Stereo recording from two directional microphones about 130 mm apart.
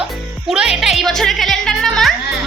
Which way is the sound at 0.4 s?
5° right (ahead or behind).